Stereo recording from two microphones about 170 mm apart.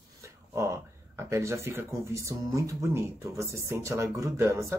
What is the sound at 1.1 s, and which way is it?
Speech, 15° right (ahead or behind).